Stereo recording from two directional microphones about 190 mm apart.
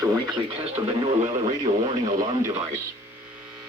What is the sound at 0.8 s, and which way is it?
Speech, 15° right (ahead or behind).